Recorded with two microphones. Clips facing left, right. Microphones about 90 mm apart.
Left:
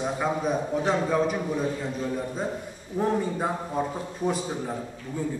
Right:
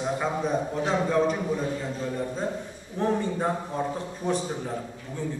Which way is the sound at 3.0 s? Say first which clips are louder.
Even; 10° left (ahead or behind).